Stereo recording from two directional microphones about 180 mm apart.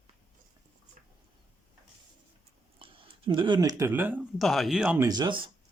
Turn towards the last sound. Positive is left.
turn(degrees=-25)  # may be behind; listen again after turning